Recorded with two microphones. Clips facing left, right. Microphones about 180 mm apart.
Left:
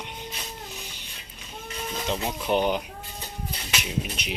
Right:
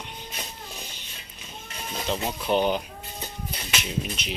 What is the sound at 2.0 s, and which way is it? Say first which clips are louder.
Speech: right 1 dB; 15° left (ahead or behind).